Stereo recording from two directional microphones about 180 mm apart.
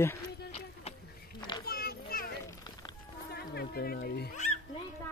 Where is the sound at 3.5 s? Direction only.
60° left (ahead or behind).